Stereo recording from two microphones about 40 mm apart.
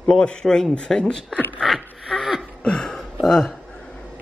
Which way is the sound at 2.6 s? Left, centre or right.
Centre.